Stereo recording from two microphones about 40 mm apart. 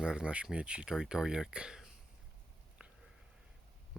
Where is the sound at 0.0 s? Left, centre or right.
Right.